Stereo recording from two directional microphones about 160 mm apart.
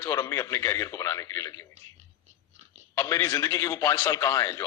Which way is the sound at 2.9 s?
20° left (ahead or behind).